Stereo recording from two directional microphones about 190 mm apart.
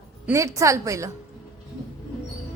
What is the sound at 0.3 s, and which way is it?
Speech, 15° right (ahead or behind).